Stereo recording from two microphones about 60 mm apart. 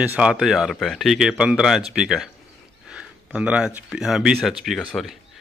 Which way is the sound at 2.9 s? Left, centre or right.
Centre.